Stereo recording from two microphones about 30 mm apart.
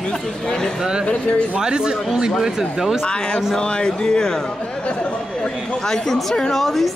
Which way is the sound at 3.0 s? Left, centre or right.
Left.